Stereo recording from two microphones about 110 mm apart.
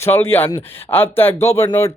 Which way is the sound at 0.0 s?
20° left (ahead or behind).